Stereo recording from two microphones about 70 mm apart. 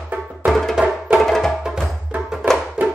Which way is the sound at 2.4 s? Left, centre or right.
Right.